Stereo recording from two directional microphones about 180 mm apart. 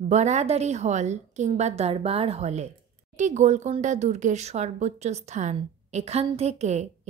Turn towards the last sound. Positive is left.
turn(degrees=-40)  # may be behind; listen again after turning